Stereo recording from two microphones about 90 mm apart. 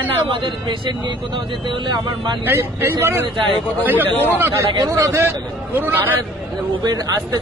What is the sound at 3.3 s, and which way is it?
Speech, 65° right (ahead or behind).